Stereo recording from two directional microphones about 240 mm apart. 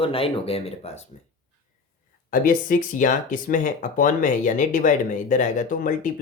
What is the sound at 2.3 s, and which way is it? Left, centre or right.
Speech, left.